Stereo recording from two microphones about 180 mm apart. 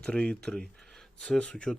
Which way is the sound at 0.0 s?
5° left (ahead or behind).